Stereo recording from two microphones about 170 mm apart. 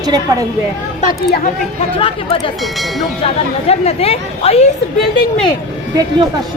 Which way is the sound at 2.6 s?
Centre (ahead or behind).